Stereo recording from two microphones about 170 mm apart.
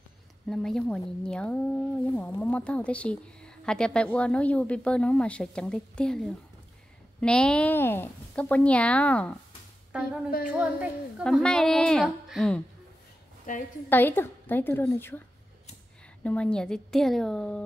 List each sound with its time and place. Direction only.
0.5 s a woman's voice: 5° left (ahead or behind)
10.4 s a woman's voice: 5° right (ahead or behind)
11.2 s a woman's voice: 5° left (ahead or behind)
13.5 s a woman's voice: 50° left (ahead or behind)
13.8 s a woman's voice: 10° left (ahead or behind)
16.3 s a woman's voice: 5° left (ahead or behind)